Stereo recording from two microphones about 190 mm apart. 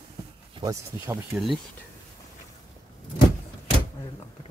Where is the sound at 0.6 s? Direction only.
15° right (ahead or behind).